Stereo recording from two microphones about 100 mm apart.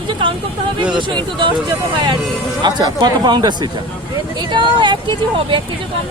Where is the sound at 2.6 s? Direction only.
40° right (ahead or behind).